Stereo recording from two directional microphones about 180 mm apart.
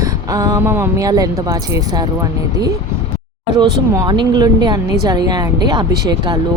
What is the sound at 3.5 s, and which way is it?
A woman's voice, 20° right (ahead or behind).